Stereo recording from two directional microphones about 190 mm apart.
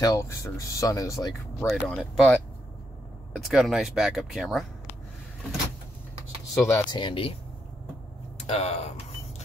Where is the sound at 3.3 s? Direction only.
Centre (ahead or behind).